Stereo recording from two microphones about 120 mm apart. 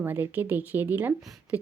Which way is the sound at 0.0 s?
15° right (ahead or behind).